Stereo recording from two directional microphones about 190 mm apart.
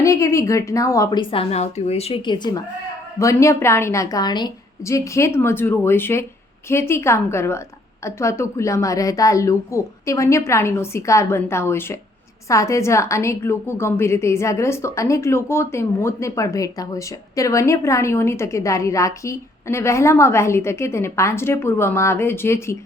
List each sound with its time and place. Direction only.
0.0 s a woman's voice: 15° left (ahead or behind)